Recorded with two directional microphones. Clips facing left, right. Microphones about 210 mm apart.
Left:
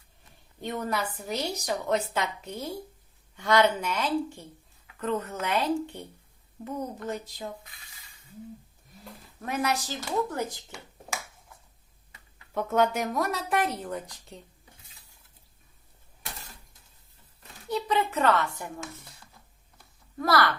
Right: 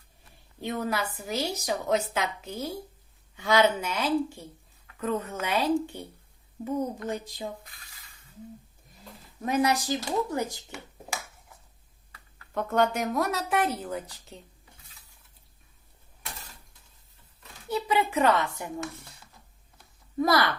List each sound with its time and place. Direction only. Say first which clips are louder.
0.6 s a woman's voice: right 1 dB; 5° right (ahead or behind)
9.4 s speech: right 4 dB; 15° right (ahead or behind)
12.5 s a woman's voice: even; 5° left (ahead or behind)
17.7 s a child's voice: right 1 dB; 5° right (ahead or behind)
20.1 s speech: right 1 dB; 15° right (ahead or behind)